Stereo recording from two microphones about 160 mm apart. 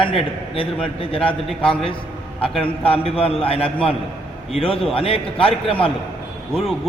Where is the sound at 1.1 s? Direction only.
35° left (ahead or behind).